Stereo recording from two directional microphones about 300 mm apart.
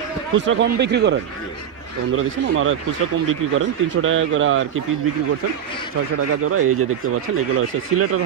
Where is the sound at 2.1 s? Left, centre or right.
Right.